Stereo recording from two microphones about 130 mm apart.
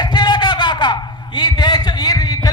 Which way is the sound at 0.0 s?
35° left (ahead or behind).